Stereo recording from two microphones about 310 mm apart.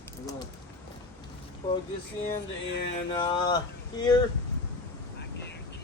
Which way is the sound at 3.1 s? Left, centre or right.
Centre.